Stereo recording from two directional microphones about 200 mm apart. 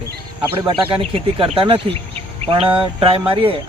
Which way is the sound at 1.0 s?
25° right (ahead or behind).